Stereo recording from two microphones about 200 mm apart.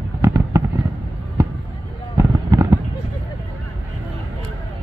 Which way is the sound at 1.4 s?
15° right (ahead or behind).